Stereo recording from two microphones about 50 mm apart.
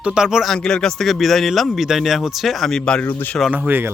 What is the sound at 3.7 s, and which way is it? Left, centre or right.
Speech, right.